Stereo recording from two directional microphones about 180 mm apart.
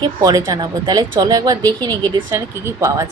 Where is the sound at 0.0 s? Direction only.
20° right (ahead or behind).